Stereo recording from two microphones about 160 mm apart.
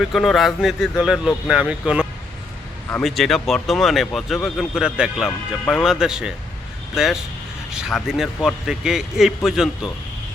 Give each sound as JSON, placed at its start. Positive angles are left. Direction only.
{"t": 0.0, "sound": "a man's voice", "side_deg": 0}